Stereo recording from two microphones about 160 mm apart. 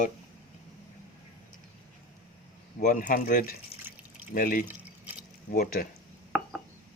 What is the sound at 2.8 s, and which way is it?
Speech, 55° left (ahead or behind).